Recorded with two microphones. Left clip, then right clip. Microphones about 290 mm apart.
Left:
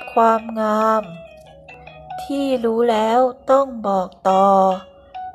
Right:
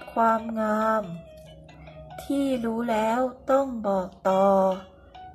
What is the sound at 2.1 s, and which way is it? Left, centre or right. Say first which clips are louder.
Speech: left 6 dB; centre.